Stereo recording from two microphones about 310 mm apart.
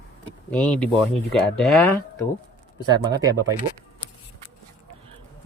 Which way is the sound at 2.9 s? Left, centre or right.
Centre.